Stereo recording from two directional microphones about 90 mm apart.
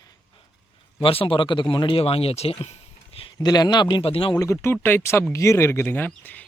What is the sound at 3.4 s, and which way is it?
Speech, 50° left (ahead or behind).